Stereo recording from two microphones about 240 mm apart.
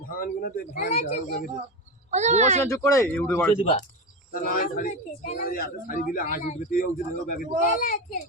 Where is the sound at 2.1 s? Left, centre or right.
Right.